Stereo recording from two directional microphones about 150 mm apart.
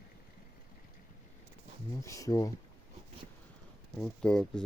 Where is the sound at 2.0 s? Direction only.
20° left (ahead or behind).